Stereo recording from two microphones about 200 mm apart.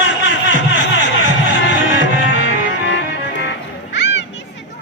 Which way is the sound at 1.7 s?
65° left (ahead or behind).